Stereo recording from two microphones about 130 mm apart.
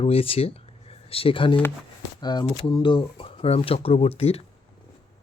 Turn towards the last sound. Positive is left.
turn(degrees=50)  # may be behind; listen again after turning